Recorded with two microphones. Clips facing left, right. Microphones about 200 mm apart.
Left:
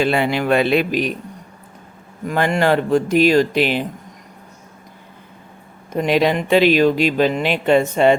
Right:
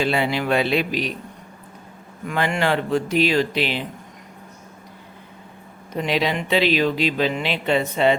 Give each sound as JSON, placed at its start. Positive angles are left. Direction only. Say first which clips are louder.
{"t": 0.0, "sound": "speech", "louder": "left 4 dB", "side_deg": 55}
{"t": 2.2, "sound": "speech", "louder": "left 5 dB", "side_deg": 40}
{"t": 5.9, "sound": "speech", "louder": "left 6 dB", "side_deg": 50}